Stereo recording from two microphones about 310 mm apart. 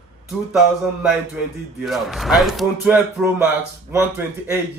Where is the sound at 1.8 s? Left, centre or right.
Centre.